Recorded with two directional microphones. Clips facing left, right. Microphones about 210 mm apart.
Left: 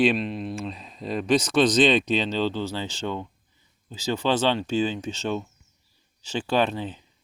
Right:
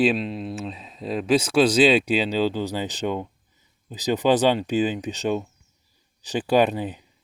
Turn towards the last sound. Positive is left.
turn(degrees=-15)  # may be behind; listen again after turning